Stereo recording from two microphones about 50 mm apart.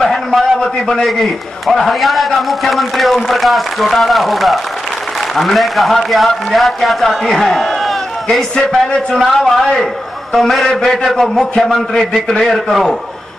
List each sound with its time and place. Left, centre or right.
0.0 s a sound: centre
0.6 s a man's voice: centre
1.0 s a man's voice: centre